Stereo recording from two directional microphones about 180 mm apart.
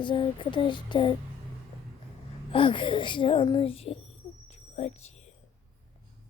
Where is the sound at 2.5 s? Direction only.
30° left (ahead or behind).